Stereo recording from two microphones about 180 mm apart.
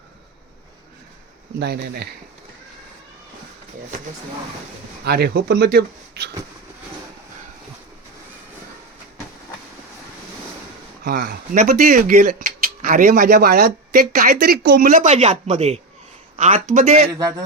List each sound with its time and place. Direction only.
1.5 s speech: 65° right (ahead or behind)
5.0 s speech: 65° right (ahead or behind)
11.0 s speech: 60° right (ahead or behind); by 17.1 s 40° right (ahead or behind)
17.2 s music: 20° right (ahead or behind)